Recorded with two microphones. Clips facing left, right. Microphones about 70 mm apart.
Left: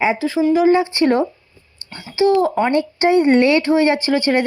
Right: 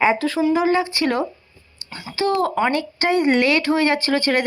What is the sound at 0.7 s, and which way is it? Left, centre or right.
Speech, left.